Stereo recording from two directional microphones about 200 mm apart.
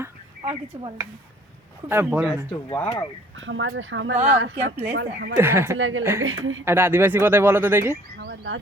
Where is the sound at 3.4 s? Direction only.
70° right (ahead or behind).